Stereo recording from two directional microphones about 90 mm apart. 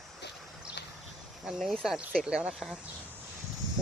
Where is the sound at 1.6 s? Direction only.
5° right (ahead or behind).